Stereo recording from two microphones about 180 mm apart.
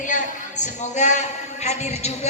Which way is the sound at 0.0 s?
45° left (ahead or behind).